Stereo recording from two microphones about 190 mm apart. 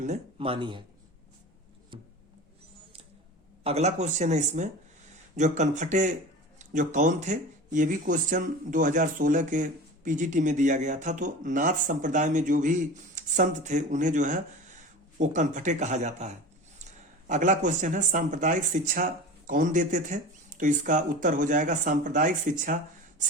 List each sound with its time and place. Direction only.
0.0 s speech: 35° right (ahead or behind)
1.9 s a sound: 25° right (ahead or behind)
3.6 s speech: 35° right (ahead or behind)